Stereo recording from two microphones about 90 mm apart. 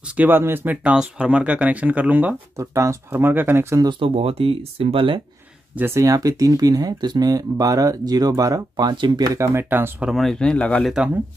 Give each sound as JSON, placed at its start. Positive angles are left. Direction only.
{"t": 0.1, "sound": "speech", "side_deg": -20}
{"t": 2.5, "sound": "speech", "side_deg": -35}
{"t": 4.0, "sound": "speech", "side_deg": -90}
{"t": 5.8, "sound": "speech", "side_deg": -30}
{"t": 9.2, "sound": "speech", "side_deg": -35}
{"t": 10.1, "sound": "speech", "side_deg": 5}